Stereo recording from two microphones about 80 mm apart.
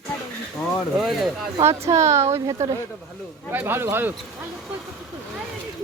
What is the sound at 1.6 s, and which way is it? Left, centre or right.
Speech, right.